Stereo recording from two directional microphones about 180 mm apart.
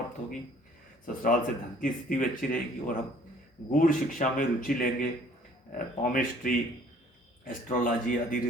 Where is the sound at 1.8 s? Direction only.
50° left (ahead or behind).